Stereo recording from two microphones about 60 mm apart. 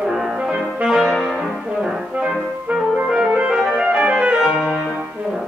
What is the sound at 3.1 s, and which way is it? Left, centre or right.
Clarinet, centre.